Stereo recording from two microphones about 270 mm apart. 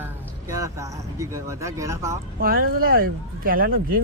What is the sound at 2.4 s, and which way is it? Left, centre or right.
Speech, right.